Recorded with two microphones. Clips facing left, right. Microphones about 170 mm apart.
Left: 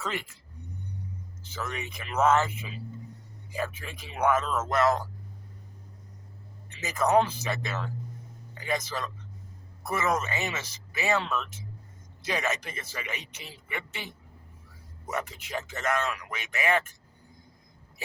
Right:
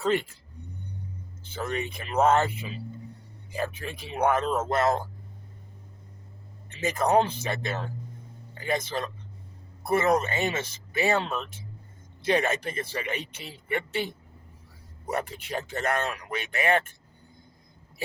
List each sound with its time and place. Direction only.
0.0 s speech: 30° right (ahead or behind)
1.5 s speech: 30° right (ahead or behind)
3.5 s speech: 35° right (ahead or behind)
6.8 s speech: 30° right (ahead or behind)